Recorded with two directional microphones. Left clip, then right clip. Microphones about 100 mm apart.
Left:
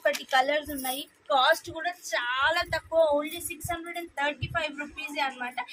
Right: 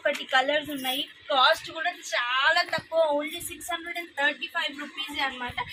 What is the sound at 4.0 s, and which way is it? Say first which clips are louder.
Speech: right 5 dB; 40° left (ahead or behind).